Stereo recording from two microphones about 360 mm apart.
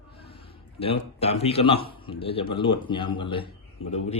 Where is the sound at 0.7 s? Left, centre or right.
Centre.